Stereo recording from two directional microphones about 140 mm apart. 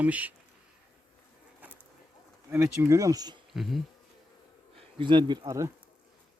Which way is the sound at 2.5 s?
20° right (ahead or behind).